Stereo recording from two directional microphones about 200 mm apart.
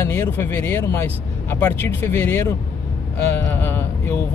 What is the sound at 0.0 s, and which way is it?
Speech, 10° left (ahead or behind).